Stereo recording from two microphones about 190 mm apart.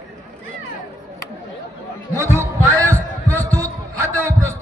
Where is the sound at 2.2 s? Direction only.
15° right (ahead or behind).